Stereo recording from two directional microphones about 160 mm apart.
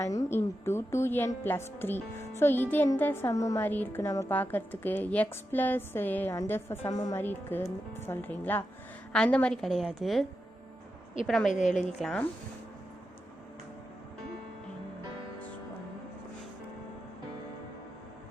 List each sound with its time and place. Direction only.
0.0 s a woman's voice: 20° left (ahead or behind); by 10.2 s centre (ahead or behind)
11.3 s a woman's voice: centre (ahead or behind)